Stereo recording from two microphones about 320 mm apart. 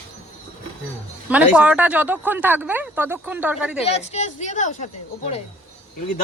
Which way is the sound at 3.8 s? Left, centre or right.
Centre.